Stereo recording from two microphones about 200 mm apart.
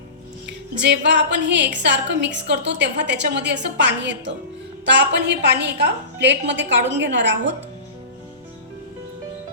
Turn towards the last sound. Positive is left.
turn(degrees=-65)  # may be behind; listen again after turning